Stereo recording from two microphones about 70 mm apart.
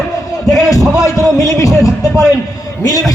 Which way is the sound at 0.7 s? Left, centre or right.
Left.